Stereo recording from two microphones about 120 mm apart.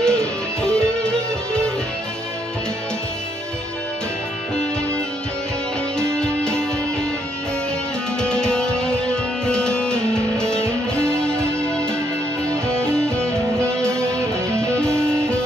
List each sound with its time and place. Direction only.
0.0 s music: 5° left (ahead or behind)
6.1 s music: 5° left (ahead or behind)
8.2 s music: 5° left (ahead or behind)
10.6 s music: 20° right (ahead or behind)
11.1 s music: 5° left (ahead or behind)
13.7 s music: 25° right (ahead or behind)
14.7 s music: 10° left (ahead or behind)